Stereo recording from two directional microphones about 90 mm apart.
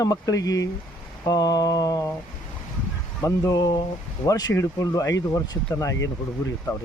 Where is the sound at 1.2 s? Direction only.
45° left (ahead or behind).